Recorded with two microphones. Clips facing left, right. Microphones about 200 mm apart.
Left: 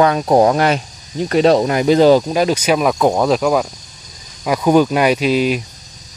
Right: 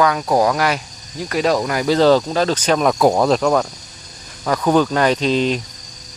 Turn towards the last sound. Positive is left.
turn(degrees=10)  # may be behind; listen again after turning